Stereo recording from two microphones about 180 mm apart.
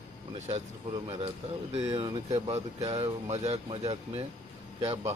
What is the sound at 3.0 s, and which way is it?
Speech, 35° right (ahead or behind).